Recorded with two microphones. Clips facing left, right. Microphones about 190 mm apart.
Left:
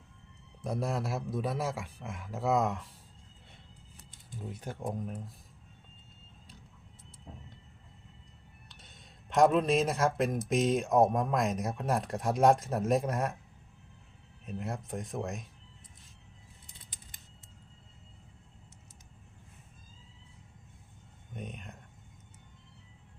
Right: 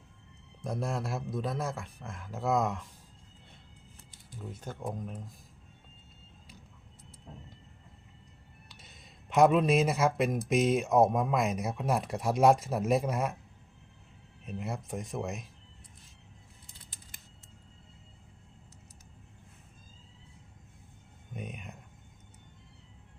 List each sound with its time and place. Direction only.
0.6 s speech: centre (ahead or behind)
4.3 s speech: 15° left (ahead or behind)
8.8 s speech: 5° right (ahead or behind)
14.4 s speech: centre (ahead or behind)
21.3 s a sound: 5° right (ahead or behind)